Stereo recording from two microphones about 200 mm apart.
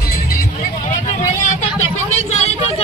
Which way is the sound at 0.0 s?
50° left (ahead or behind).